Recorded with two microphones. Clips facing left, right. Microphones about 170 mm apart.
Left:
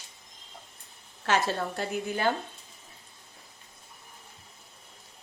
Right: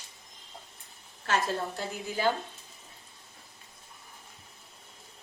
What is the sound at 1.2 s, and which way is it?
A woman's voice, 70° left (ahead or behind).